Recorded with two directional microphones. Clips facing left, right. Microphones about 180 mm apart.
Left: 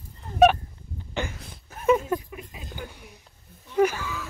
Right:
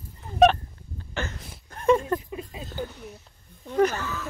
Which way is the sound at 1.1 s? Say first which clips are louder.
Left 2 dB; 10° left (ahead or behind).